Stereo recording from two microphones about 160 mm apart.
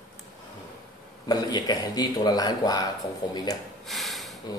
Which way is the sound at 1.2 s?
25° left (ahead or behind).